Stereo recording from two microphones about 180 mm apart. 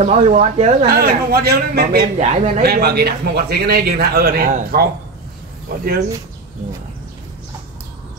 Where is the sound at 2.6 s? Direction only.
60° right (ahead or behind).